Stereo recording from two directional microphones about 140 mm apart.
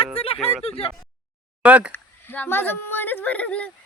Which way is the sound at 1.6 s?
10° right (ahead or behind).